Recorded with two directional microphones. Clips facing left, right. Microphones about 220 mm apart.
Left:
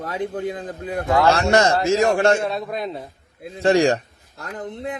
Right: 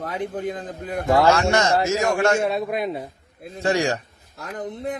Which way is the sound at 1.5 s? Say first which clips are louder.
Left 3 dB; 35° left (ahead or behind).